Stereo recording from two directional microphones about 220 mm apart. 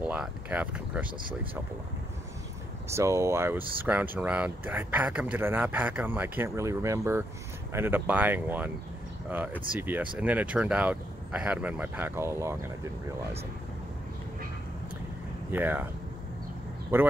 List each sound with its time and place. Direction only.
0.0 s speech: 5° right (ahead or behind)
2.9 s speech: 15° right (ahead or behind)
15.5 s speech: 10° right (ahead or behind)
16.9 s speech: 10° right (ahead or behind)